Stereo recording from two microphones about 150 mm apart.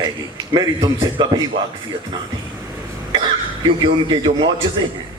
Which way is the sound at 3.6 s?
30° right (ahead or behind).